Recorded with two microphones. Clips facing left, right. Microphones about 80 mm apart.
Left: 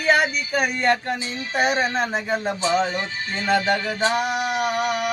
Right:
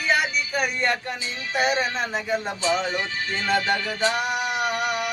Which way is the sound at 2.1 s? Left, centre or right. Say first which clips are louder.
Left 2 dB; left.